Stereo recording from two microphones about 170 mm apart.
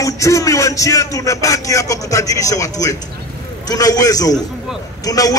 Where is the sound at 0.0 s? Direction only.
20° left (ahead or behind).